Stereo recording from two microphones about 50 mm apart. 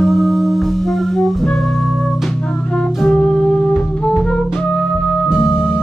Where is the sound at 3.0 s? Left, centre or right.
Centre.